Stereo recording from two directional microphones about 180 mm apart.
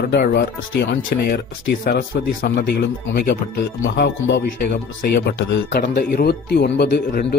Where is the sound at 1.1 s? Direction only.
60° left (ahead or behind).